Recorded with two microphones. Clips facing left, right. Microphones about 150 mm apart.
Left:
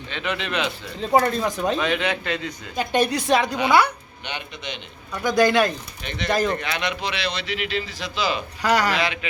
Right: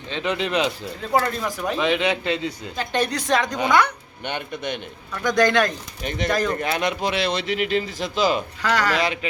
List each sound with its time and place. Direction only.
0.1 s speech: 30° right (ahead or behind)
1.2 s speech: 20° left (ahead or behind)
1.7 s a man's voice: 20° right (ahead or behind)
2.7 s a woman's voice: 10° left (ahead or behind)
4.3 s speech: 50° right (ahead or behind)
5.1 s a woman's voice: 10° left (ahead or behind)
6.0 s speech: 45° right (ahead or behind)
8.6 s a woman's voice: 10° left (ahead or behind)